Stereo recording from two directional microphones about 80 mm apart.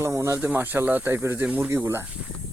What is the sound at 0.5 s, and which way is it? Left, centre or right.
Speech, right.